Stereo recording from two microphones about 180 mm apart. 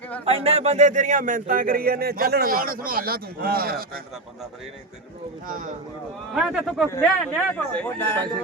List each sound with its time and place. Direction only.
0.3 s speech: 35° right (ahead or behind); by 4.0 s 55° right (ahead or behind)
5.5 s speech: 50° right (ahead or behind)
6.3 s speech: 5° right (ahead or behind)
6.9 s a man's voice: 10° left (ahead or behind)